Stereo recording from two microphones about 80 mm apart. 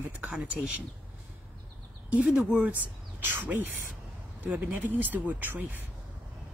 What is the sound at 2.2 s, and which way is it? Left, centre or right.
Speech, centre.